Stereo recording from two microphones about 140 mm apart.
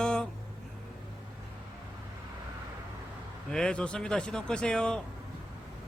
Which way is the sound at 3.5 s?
5° left (ahead or behind).